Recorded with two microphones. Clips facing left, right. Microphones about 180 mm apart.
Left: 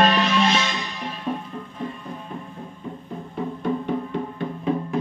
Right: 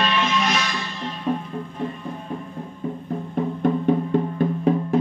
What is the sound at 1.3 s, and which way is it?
Music, 5° right (ahead or behind).